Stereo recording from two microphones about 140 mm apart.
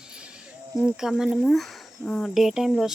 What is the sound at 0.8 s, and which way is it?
Speech, 5° right (ahead or behind).